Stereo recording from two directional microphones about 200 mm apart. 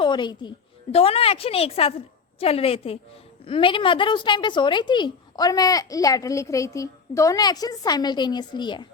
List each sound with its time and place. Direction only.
0.0 s a woman's voice: 20° left (ahead or behind)